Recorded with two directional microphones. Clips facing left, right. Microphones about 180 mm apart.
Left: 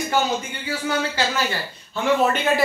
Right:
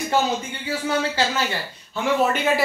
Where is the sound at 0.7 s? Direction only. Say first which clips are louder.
Right 1 dB; 25° right (ahead or behind).